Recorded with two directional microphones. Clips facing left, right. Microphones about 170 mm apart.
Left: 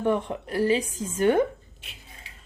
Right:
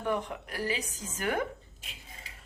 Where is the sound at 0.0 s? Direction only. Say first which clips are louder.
Left 7 dB; 25° left (ahead or behind).